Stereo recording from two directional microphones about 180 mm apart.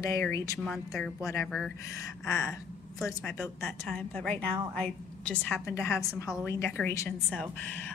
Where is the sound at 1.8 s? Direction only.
20° left (ahead or behind).